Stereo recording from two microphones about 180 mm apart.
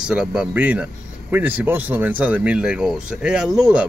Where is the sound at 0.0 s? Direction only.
5° right (ahead or behind).